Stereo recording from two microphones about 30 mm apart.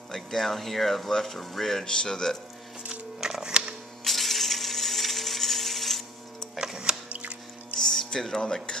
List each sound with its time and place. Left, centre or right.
0.1 s speech: centre
1.9 s speech: left
2.9 s pig: right
4.0 s a sound: centre
6.6 s music: centre
7.1 s drip: right
7.8 s a sound: centre